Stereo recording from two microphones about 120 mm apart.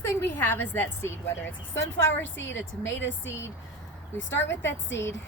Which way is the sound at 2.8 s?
20° left (ahead or behind).